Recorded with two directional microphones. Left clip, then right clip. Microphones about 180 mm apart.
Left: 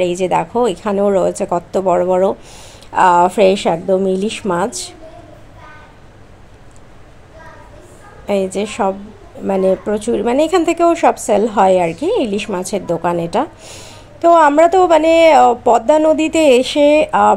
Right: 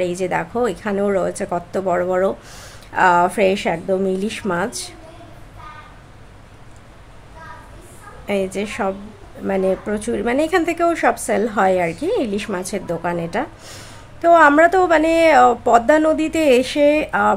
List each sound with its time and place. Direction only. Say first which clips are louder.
0.0 s speech: left 6 dB; 15° left (ahead or behind)
8.3 s speech: left 4 dB; 15° left (ahead or behind)